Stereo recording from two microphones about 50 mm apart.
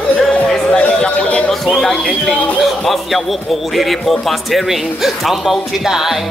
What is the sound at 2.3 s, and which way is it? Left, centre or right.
A man's voice, centre.